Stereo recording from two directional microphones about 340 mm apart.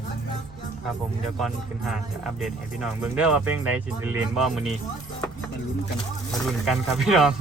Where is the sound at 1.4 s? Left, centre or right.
Centre.